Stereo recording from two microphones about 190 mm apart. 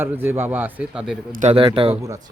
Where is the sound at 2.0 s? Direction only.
15° right (ahead or behind).